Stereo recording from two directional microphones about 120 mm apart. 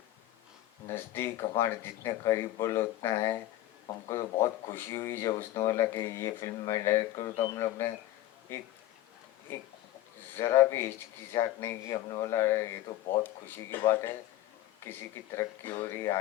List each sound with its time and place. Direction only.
0.9 s speech: 20° left (ahead or behind)
10.3 s speech: 25° left (ahead or behind)
13.2 s speech: 15° left (ahead or behind)